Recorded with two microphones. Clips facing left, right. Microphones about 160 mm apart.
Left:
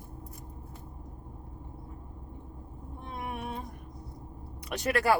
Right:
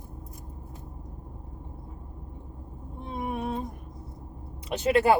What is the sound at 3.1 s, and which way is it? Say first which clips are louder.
Music: right 6 dB; 25° right (ahead or behind).